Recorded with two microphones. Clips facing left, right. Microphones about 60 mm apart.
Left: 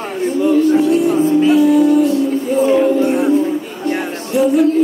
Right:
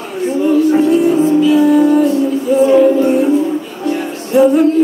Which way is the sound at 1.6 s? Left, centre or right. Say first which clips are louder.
Right 1 dB; right.